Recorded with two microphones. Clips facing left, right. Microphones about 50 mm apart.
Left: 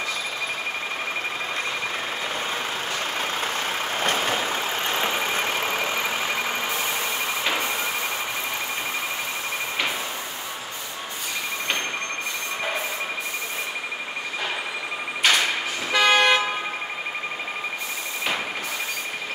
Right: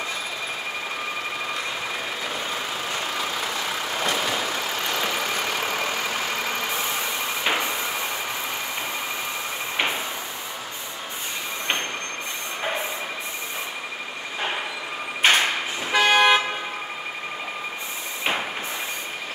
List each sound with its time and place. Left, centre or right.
3.2 s vehicle: left
7.4 s vehicle: right
15.2 s a sound: right
15.9 s toot: centre